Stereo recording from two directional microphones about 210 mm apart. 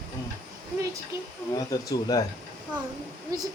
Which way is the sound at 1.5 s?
15° left (ahead or behind).